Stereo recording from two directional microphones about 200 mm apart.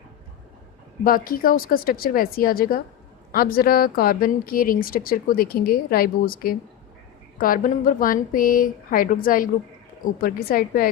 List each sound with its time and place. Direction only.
1.0 s speech: 45° left (ahead or behind)